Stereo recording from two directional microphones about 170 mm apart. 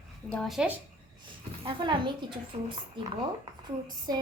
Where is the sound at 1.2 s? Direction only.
30° right (ahead or behind).